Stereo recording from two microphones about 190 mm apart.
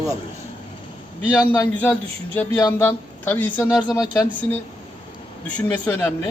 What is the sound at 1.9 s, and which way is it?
Speech, 10° left (ahead or behind).